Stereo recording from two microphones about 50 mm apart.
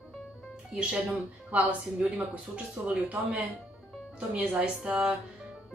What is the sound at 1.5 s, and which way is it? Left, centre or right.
A woman's voice, right.